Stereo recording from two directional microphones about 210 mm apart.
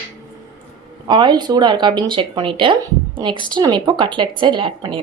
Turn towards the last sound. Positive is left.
turn(degrees=-25)  # may be behind; listen again after turning